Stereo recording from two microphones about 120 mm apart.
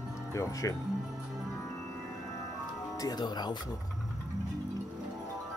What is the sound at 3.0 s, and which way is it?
Speech, 35° left (ahead or behind).